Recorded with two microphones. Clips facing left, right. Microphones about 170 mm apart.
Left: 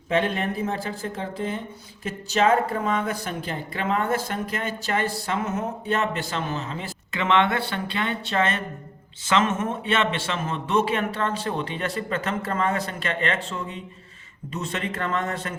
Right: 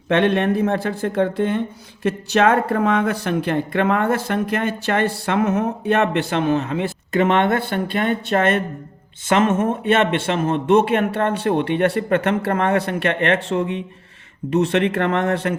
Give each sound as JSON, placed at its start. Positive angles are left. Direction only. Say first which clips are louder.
{"t": 0.1, "sound": "speech", "louder": "right 7 dB", "side_deg": -75}